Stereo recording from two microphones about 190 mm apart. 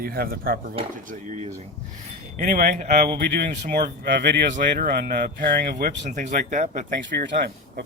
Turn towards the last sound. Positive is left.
turn(degrees=-55)  # may be behind; listen again after turning